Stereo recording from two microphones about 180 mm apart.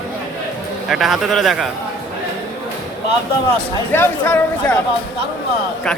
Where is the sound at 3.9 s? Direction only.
15° left (ahead or behind).